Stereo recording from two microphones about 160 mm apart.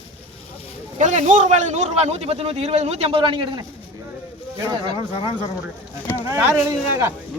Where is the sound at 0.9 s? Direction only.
50° right (ahead or behind); by 3.6 s 30° right (ahead or behind).